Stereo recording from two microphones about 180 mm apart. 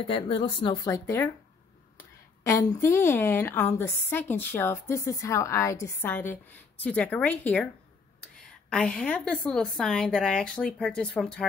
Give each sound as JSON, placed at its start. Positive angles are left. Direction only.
{"t": 0.0, "sound": "speech", "side_deg": 30}
{"t": 2.4, "sound": "a woman's voice", "side_deg": 15}
{"t": 8.6, "sound": "a woman's voice", "side_deg": 5}